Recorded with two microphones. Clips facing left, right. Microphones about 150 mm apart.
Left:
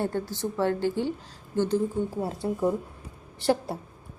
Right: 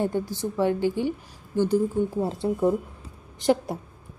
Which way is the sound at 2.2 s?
25° right (ahead or behind).